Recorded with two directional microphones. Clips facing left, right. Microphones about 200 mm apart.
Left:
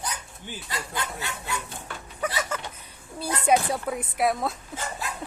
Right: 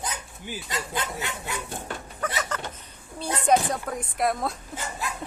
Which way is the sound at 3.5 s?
5° left (ahead or behind).